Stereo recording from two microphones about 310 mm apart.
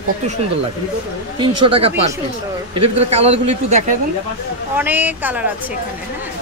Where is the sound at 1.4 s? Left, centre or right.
Centre.